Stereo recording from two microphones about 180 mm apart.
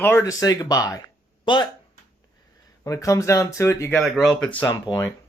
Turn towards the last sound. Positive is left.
turn(degrees=25)  # may be behind; listen again after turning